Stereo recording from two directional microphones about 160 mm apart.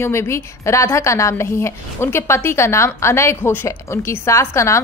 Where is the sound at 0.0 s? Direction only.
15° left (ahead or behind).